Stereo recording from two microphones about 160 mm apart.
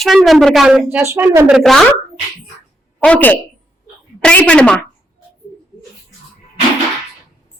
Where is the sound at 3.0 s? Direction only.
10° left (ahead or behind).